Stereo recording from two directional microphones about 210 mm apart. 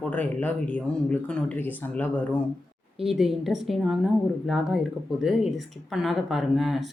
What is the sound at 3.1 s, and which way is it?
Speech, centre (ahead or behind).